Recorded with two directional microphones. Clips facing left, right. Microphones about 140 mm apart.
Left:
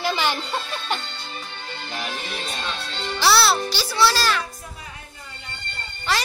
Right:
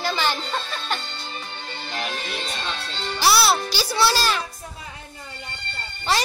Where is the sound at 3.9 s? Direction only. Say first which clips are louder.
Left 1 dB; 25° right (ahead or behind).